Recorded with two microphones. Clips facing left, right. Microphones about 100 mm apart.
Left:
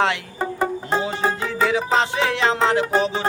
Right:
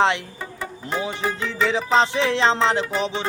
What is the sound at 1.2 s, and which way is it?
Music, 30° left (ahead or behind).